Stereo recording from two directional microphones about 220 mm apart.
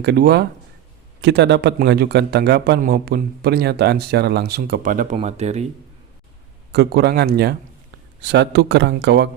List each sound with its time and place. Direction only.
0.0 s a man's voice: 45° right (ahead or behind); by 5.6 s 30° right (ahead or behind)
6.7 s a man's voice: 50° right (ahead or behind)